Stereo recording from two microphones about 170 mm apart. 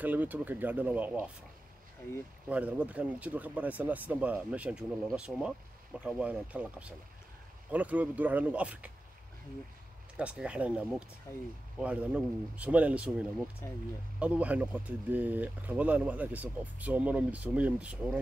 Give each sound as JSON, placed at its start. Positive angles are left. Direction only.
{"t": 0.0, "sound": "speech", "side_deg": -10}
{"t": 2.5, "sound": "speech", "side_deg": -10}
{"t": 10.1, "sound": "speech", "side_deg": -5}
{"t": 11.3, "sound": "speech", "side_deg": 15}
{"t": 11.8, "sound": "speech", "side_deg": -10}